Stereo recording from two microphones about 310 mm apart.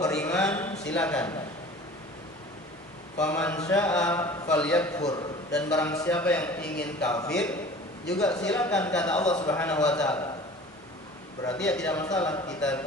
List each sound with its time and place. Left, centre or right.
0.0 s a sound: centre
0.9 s a man's voice: centre
3.2 s a man's voice: centre
6.6 s a man's voice: left
7.0 s a man's voice: centre
9.3 s a man's voice: centre
9.6 s a man's voice: centre
11.4 s a man's voice: centre